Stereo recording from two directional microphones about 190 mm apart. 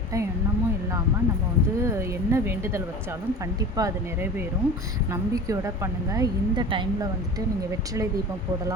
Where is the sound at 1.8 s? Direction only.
15° right (ahead or behind).